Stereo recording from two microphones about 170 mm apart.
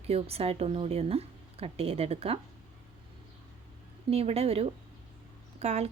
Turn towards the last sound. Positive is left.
turn(degrees=-40)  # may be behind; listen again after turning